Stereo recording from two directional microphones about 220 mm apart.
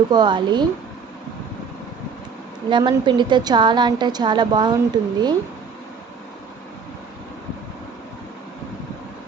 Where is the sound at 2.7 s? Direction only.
20° right (ahead or behind).